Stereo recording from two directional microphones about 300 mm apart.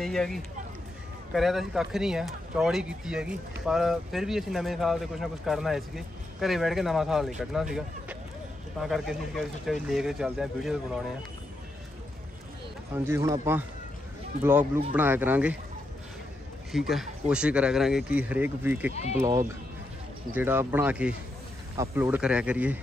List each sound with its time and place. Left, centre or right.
0.0 s speech: centre
12.9 s a man's voice: centre
14.6 s speech: centre
15.0 s speech: centre
16.7 s speech: centre
18.9 s speech: left
19.1 s a man's voice: centre